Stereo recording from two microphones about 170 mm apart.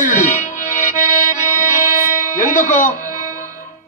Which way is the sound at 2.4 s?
50° left (ahead or behind).